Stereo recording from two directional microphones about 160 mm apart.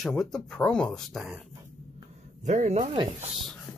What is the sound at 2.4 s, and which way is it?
Speech, 50° right (ahead or behind).